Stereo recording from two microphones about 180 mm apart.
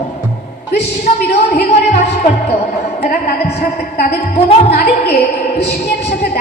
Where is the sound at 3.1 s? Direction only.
65° left (ahead or behind).